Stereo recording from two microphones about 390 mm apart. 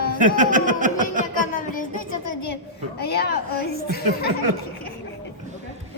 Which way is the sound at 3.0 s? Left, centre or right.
Left.